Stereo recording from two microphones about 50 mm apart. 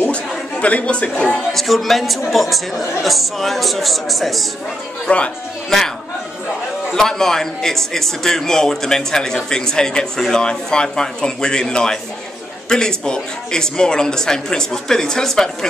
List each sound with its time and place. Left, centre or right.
0.1 s a sound: left
1.5 s speech: centre
5.0 s speech: left
6.9 s a man's voice: centre